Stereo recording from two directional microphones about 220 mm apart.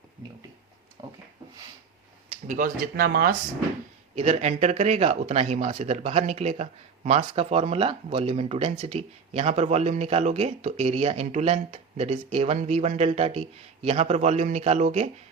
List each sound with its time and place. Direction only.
2.5 s speech: 40° right (ahead or behind)
4.1 s speech: 30° right (ahead or behind)